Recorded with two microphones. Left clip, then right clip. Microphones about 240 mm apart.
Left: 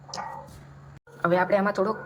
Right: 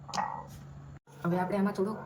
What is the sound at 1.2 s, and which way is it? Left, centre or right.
Speech, left.